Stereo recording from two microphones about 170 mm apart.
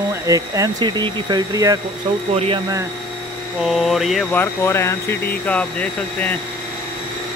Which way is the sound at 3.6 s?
Centre (ahead or behind).